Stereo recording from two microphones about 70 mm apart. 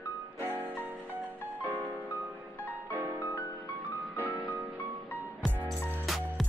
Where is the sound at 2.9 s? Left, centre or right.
Right.